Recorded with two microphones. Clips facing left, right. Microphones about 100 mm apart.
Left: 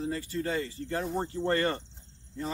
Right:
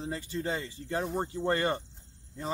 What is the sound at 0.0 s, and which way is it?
Speech, 20° right (ahead or behind).